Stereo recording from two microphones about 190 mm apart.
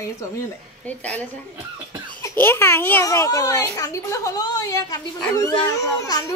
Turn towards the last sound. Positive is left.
turn(degrees=20)  # may be behind; listen again after turning